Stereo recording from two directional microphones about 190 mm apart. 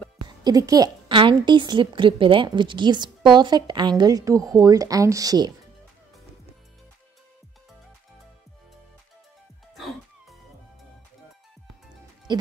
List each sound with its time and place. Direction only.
0.4 s a woman's voice: 20° right (ahead or behind)
12.3 s music: 25° right (ahead or behind)